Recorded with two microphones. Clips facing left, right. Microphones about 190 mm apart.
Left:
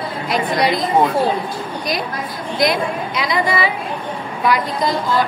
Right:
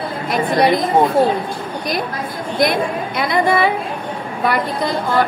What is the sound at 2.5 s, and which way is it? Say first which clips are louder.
A woman's voice: right 1 dB; 55° right (ahead or behind).